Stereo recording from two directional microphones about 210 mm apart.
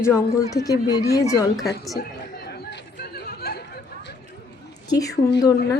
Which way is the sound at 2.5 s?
55° left (ahead or behind).